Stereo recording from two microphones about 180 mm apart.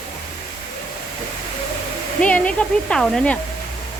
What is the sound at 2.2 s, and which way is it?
Speech, 5° left (ahead or behind).